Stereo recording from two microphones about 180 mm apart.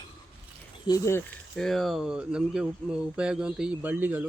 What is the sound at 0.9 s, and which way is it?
Speech, 15° left (ahead or behind).